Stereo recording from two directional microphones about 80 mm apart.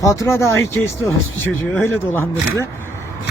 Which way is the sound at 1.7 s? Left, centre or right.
Left.